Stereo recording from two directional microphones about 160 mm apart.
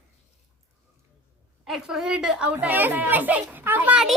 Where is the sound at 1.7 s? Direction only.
5° right (ahead or behind).